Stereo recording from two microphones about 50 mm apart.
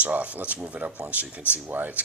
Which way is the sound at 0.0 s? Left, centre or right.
Right.